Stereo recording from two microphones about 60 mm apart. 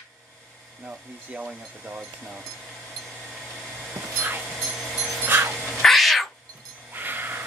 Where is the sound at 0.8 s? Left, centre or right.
Right.